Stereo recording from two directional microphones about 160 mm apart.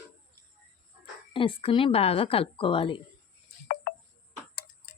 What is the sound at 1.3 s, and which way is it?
Speech, 35° left (ahead or behind).